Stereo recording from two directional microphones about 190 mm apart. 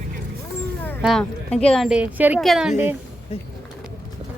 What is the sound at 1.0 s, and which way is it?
Speech, centre (ahead or behind).